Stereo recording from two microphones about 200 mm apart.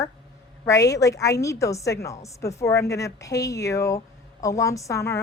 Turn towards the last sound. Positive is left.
turn(degrees=15)  # may be behind; listen again after turning